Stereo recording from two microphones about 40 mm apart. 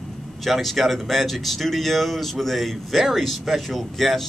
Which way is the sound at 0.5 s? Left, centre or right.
Centre.